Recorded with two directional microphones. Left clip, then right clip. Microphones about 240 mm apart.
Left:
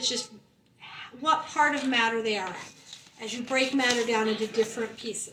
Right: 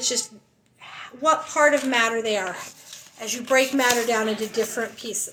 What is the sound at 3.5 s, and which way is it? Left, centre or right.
Speech, centre.